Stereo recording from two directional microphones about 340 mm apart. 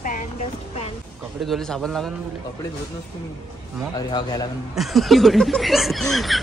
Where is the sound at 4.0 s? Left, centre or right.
Centre.